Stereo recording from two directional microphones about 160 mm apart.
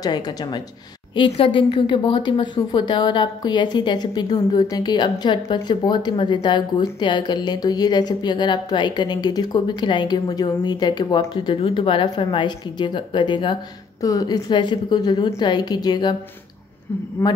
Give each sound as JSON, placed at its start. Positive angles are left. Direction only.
{"t": 0.0, "sound": "a woman's voice", "side_deg": 25}
{"t": 17.2, "sound": "speech", "side_deg": 15}